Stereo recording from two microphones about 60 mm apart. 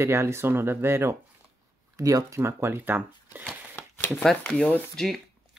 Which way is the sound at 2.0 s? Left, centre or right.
Right.